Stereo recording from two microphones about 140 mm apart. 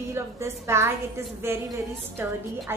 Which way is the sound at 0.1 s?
20° right (ahead or behind).